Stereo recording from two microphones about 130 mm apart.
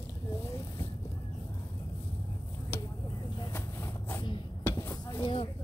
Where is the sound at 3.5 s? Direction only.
20° left (ahead or behind).